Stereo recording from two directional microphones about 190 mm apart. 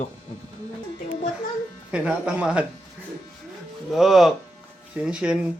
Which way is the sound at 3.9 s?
Centre (ahead or behind).